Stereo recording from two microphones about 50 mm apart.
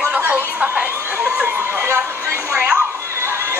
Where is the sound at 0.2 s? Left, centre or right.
Right.